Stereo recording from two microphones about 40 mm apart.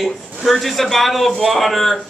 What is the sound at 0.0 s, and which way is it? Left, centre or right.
A man's voice, centre.